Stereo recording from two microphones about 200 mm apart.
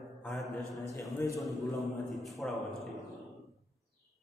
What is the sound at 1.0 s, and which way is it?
Speech, 15° left (ahead or behind).